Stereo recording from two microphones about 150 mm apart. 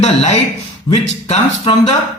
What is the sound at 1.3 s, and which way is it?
Speech, 40° left (ahead or behind).